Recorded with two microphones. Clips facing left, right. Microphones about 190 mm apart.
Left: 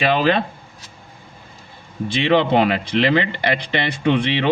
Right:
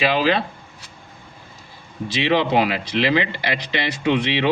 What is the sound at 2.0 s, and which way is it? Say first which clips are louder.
Speech: left 3 dB; 55° left (ahead or behind).